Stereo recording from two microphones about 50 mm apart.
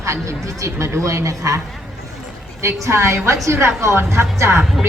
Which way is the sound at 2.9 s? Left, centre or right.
Right.